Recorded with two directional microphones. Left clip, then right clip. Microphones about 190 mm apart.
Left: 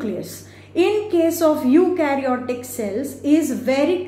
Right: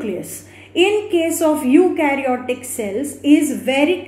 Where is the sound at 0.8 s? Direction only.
25° right (ahead or behind).